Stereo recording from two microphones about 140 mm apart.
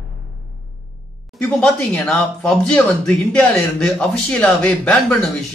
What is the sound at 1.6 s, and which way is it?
Speech, 5° left (ahead or behind).